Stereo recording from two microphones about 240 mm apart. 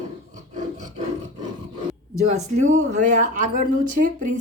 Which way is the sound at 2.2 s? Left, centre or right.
Right.